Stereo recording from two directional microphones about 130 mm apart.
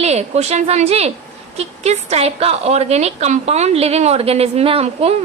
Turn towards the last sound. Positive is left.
turn(degrees=-50)  # may be behind; listen again after turning